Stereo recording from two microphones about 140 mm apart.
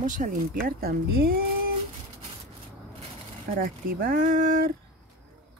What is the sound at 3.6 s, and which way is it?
Speech, 90° right.